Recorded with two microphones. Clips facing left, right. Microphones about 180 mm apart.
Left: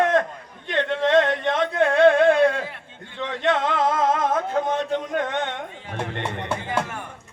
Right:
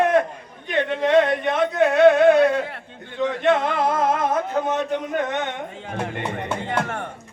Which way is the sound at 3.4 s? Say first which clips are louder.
Right 1 dB; 10° right (ahead or behind).